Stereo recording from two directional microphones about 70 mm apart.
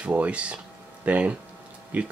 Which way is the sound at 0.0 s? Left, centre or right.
Centre.